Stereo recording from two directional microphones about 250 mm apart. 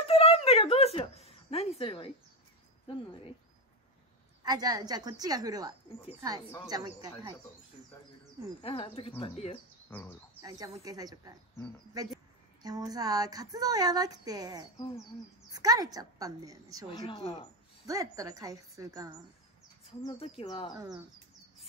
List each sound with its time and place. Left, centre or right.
0.0 s a sound: left
4.4 s a woman's voice: centre
8.6 s speech: left
9.8 s speech: centre
10.4 s a woman's voice: centre
16.9 s speech: centre
17.8 s a woman's voice: centre
20.0 s speech: left